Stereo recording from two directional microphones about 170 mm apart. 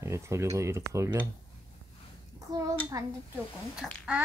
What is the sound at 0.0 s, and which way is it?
Speech, 15° right (ahead or behind).